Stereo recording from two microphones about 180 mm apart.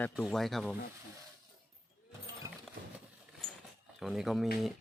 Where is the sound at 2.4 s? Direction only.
20° right (ahead or behind).